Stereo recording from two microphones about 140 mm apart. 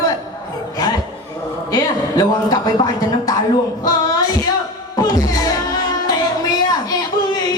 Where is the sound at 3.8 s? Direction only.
25° left (ahead or behind).